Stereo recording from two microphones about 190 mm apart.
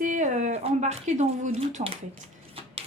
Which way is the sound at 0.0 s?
40° right (ahead or behind).